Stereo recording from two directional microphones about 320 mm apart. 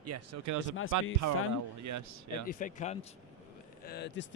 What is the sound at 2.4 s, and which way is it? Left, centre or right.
Speech, left.